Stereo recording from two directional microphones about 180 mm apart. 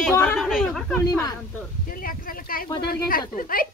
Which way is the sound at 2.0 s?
55° left (ahead or behind).